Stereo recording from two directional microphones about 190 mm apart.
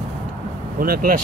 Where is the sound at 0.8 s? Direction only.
50° right (ahead or behind).